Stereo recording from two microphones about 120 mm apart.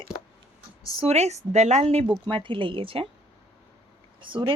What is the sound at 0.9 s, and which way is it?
Speech, 60° right (ahead or behind).